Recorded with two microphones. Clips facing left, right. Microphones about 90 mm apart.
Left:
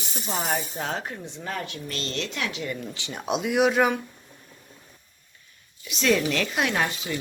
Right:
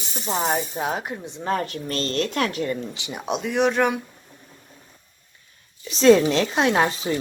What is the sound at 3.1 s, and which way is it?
Speech, centre (ahead or behind).